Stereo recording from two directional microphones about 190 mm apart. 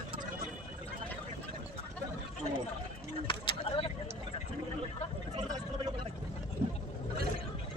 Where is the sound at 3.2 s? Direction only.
25° left (ahead or behind).